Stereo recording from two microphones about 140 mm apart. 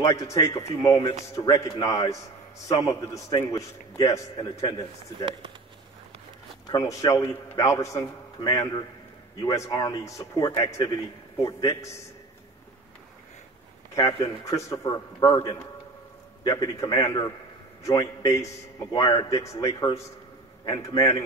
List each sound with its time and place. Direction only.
0.0 s a man's voice: 25° left (ahead or behind)
6.7 s a man's voice: 25° left (ahead or behind)
13.9 s a man's voice: 25° left (ahead or behind)